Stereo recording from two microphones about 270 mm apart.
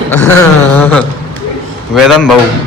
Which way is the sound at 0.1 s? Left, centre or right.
Centre.